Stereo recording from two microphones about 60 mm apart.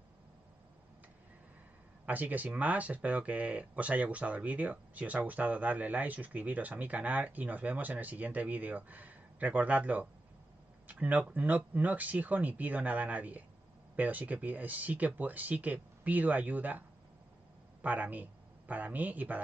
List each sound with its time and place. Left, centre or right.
2.0 s speech: right
17.8 s speech: right